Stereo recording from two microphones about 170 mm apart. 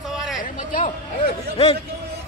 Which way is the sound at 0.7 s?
55° left (ahead or behind).